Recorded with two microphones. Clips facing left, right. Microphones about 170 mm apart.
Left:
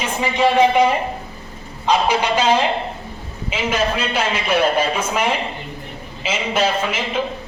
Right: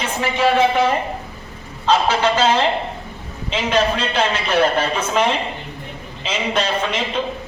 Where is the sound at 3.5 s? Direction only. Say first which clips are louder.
Right 2 dB; 10° left (ahead or behind).